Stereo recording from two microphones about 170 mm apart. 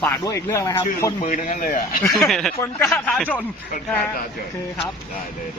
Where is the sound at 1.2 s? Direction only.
50° left (ahead or behind).